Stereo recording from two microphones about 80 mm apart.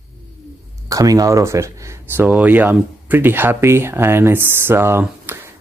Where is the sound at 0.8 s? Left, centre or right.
Right.